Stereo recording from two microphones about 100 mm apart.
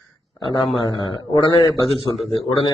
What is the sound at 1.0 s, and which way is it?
Speech, 55° left (ahead or behind).